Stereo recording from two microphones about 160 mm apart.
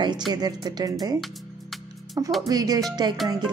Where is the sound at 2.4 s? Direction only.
25° right (ahead or behind).